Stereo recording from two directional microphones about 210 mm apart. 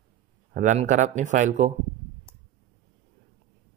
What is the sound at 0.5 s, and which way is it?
Speech, 35° right (ahead or behind).